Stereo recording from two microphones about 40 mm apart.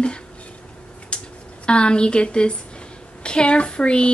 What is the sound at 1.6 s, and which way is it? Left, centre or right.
Speech, left.